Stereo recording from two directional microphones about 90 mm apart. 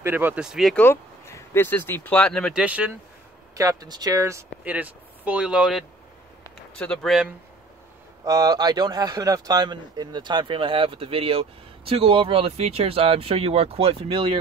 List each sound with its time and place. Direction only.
0.0 s speech: 20° right (ahead or behind)
0.4 s speech: 5° right (ahead or behind)
0.7 s speech: 25° left (ahead or behind)
2.1 s speech: 10° left (ahead or behind)
2.5 s speech: 15° right (ahead or behind)
3.5 s speech: 40° right (ahead or behind)
4.6 s speech: 20° right (ahead or behind)
6.7 s speech: 10° left (ahead or behind)
8.3 s speech: 45° right (ahead or behind); by 14.3 s 90° right